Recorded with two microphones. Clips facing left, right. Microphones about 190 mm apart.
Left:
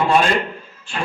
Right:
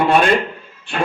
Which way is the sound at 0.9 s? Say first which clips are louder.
Right 5 dB; 60° right (ahead or behind).